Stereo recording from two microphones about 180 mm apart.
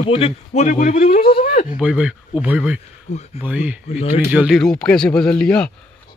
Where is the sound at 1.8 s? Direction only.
5° right (ahead or behind).